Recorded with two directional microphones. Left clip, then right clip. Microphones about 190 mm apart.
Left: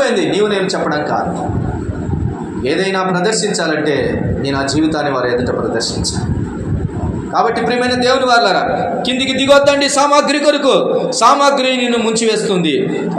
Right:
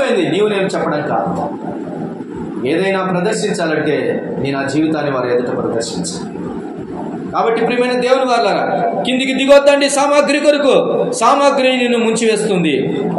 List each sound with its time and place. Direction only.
2.6 s a man's voice: 10° left (ahead or behind)
7.3 s a man's voice: 20° left (ahead or behind)